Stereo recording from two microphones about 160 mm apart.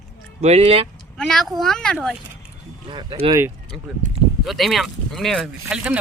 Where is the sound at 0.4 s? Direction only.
40° right (ahead or behind).